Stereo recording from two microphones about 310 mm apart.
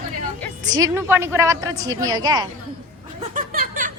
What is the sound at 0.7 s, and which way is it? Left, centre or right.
A woman's voice, centre.